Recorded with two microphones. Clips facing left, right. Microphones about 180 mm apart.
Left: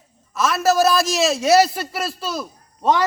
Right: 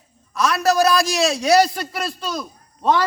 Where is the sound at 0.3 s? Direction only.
Centre (ahead or behind).